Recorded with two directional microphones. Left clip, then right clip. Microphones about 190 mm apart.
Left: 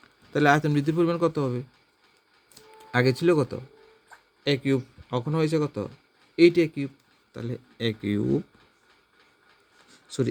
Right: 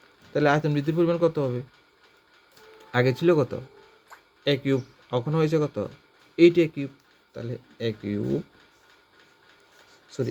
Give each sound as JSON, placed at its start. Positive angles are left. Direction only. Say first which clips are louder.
{"t": 0.3, "sound": "speech", "louder": "left 1 dB", "side_deg": 30}
{"t": 2.7, "sound": "speech", "louder": "even", "side_deg": 25}
{"t": 7.3, "sound": "speech", "louder": "even", "side_deg": 35}